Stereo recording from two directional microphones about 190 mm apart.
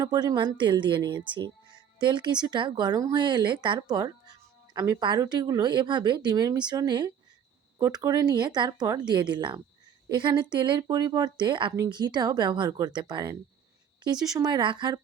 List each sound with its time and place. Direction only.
0.0 s speech: 20° right (ahead or behind)